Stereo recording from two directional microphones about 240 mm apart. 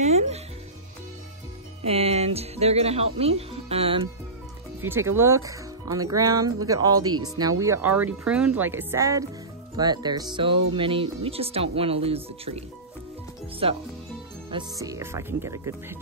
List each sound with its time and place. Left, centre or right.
0.0 s speech: right
1.9 s speech: right
4.8 s speech: centre